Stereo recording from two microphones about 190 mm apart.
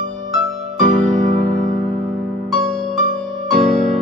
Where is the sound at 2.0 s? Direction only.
Centre (ahead or behind).